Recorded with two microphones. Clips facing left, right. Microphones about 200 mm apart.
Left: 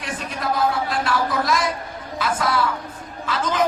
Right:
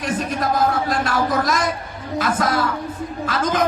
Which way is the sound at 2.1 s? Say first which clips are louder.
Right 2 dB; 45° right (ahead or behind).